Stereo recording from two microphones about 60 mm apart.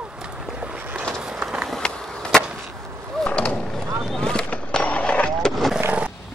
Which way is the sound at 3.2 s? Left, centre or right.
Centre.